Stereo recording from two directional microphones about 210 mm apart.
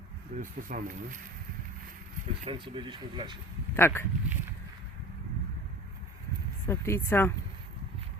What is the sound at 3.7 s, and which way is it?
Speech, 10° left (ahead or behind).